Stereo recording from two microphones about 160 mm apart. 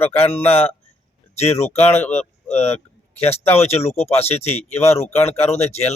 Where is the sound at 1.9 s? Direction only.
10° left (ahead or behind).